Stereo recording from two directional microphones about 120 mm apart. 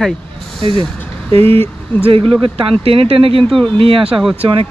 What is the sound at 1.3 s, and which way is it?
Speech, 55° right (ahead or behind).